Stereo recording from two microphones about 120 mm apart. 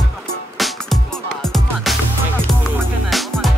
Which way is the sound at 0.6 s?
Centre (ahead or behind).